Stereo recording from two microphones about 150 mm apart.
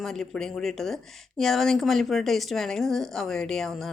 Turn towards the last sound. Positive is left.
turn(degrees=0)  # may be behind; listen again after turning